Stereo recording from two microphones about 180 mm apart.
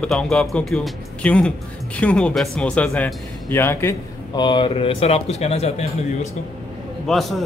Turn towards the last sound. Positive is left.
turn(degrees=0)  # may be behind; listen again after turning